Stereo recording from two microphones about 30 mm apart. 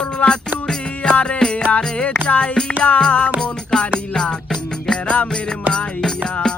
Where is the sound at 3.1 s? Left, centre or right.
Left.